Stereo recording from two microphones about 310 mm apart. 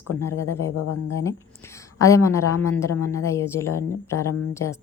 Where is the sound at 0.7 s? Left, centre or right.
Left.